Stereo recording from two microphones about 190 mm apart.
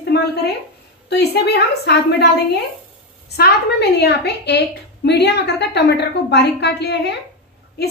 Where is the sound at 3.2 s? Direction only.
55° left (ahead or behind).